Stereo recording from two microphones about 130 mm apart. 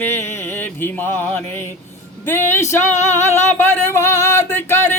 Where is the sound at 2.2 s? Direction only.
15° left (ahead or behind).